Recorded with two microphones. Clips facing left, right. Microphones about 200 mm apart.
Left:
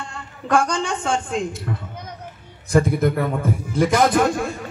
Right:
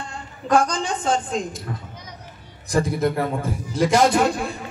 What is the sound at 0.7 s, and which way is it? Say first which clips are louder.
Speech: even; 35° right (ahead or behind).